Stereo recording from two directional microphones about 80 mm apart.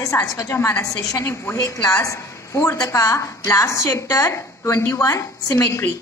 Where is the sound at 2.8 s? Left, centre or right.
Left.